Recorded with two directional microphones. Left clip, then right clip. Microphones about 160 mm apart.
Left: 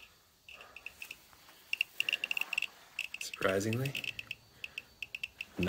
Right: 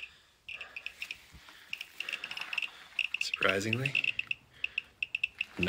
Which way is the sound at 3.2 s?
15° left (ahead or behind).